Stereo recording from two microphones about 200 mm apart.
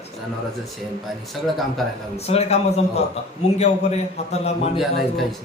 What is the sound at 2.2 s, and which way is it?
A man's voice, 30° left (ahead or behind).